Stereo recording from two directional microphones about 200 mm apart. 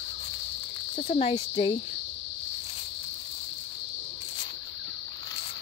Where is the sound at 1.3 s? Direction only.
25° left (ahead or behind).